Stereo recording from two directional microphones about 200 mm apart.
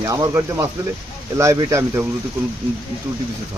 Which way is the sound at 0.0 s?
15° right (ahead or behind).